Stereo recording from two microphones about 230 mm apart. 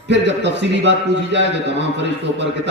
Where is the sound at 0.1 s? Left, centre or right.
Right.